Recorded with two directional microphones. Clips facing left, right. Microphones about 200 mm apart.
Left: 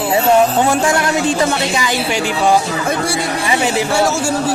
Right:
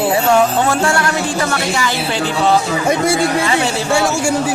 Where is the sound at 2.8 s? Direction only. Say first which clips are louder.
Right 4 dB; 20° right (ahead or behind).